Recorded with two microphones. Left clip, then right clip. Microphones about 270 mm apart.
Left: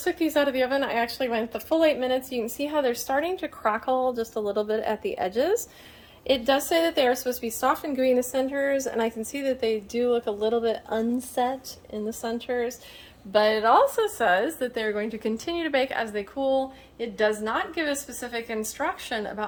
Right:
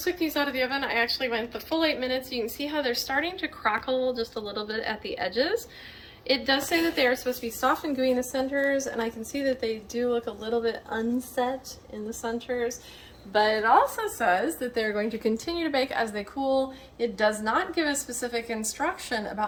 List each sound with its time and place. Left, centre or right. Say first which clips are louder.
0.0 s a woman's voice: left 4 dB; left
14.2 s a woman's voice: even; centre
14.8 s a woman's voice: right 3 dB; centre